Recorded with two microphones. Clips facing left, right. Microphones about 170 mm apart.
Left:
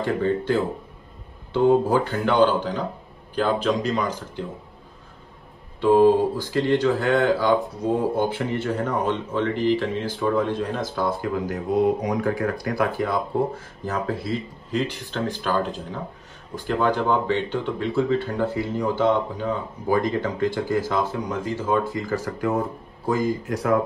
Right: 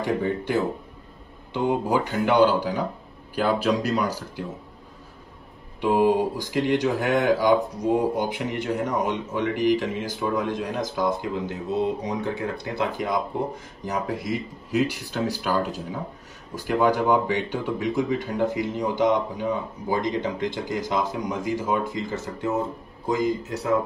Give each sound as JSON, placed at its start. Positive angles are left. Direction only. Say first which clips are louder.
{"t": 0.0, "sound": "speech", "louder": "left 2 dB", "side_deg": -15}
{"t": 5.8, "sound": "speech", "louder": "left 4 dB", "side_deg": -10}